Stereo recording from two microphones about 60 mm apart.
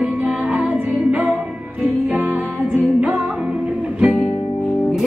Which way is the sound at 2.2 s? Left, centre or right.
Right.